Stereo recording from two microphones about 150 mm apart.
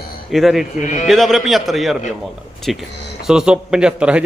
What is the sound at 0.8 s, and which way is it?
Speech, 55° left (ahead or behind).